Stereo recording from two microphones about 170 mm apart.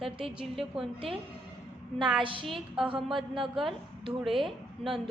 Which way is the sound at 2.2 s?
30° right (ahead or behind).